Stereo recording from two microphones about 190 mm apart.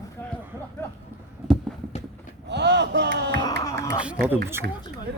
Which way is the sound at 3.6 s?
15° left (ahead or behind).